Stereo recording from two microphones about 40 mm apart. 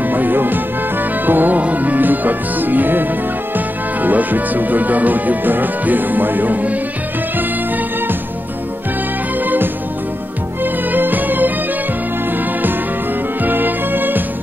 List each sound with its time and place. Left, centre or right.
0.0 s music: right
1.6 s music: right
3.5 s speech: right
10.6 s music: right
13.4 s music: right